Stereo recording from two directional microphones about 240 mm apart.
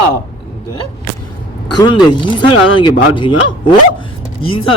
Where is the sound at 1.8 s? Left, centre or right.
Centre.